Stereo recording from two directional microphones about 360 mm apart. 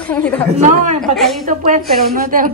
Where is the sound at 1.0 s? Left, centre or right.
Centre.